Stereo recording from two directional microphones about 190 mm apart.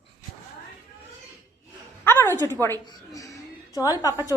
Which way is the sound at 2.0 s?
10° left (ahead or behind).